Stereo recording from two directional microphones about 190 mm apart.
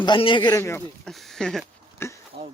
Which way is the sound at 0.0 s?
25° left (ahead or behind).